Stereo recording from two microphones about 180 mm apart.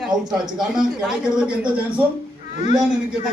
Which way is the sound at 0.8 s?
5° right (ahead or behind).